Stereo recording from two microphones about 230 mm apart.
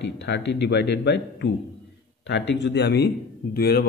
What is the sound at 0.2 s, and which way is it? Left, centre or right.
A man's voice, left.